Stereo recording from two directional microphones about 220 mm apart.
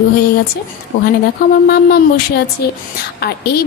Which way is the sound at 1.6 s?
45° left (ahead or behind).